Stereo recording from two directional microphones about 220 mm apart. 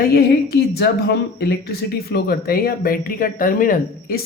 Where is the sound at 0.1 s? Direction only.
45° left (ahead or behind).